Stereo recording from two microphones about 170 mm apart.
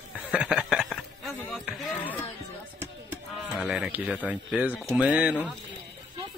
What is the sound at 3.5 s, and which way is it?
Speech, centre (ahead or behind).